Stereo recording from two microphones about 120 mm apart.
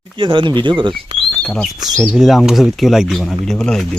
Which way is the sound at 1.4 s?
5° left (ahead or behind).